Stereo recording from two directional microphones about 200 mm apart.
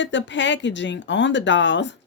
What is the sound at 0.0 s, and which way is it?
Speech, 65° left (ahead or behind).